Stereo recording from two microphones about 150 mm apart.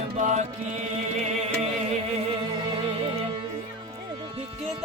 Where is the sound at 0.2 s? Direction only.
50° right (ahead or behind).